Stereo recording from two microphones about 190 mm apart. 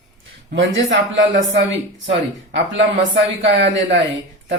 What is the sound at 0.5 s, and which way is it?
Speech, 80° right.